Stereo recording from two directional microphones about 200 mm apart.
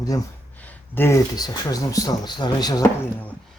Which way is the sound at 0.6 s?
10° left (ahead or behind).